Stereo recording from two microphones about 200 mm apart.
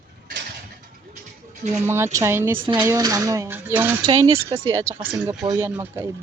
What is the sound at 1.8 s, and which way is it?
Speech, 10° right (ahead or behind).